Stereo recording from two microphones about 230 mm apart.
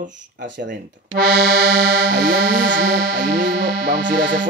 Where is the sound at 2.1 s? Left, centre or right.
Right.